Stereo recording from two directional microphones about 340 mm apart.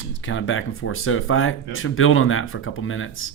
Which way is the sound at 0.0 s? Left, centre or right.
Left.